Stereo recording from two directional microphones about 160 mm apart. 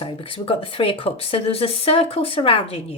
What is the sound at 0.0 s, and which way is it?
Speech, 35° left (ahead or behind).